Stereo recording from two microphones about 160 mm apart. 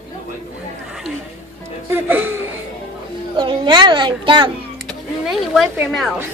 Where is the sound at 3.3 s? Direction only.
30° right (ahead or behind).